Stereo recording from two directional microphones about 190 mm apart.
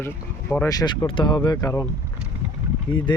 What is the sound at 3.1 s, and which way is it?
Speech, 25° left (ahead or behind).